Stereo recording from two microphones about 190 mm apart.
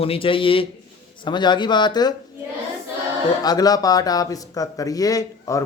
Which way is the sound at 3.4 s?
20° left (ahead or behind).